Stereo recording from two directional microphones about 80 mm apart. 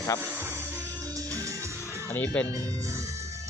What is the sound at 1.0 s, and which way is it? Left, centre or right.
Music, right.